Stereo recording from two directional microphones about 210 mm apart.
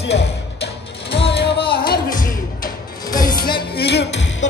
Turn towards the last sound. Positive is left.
turn(degrees=50)  # may be behind; listen again after turning